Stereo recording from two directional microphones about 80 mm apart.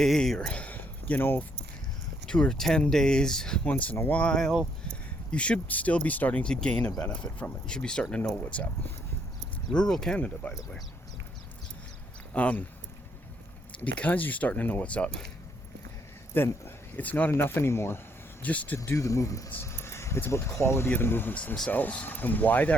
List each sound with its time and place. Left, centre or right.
0.0 s speech: centre
0.3 s speech: centre
2.2 s speech: centre
9.7 s speech: centre
12.3 s speech: centre
13.7 s speech: centre
16.3 s speech: left
18.4 s speech: centre
18.9 s speech: left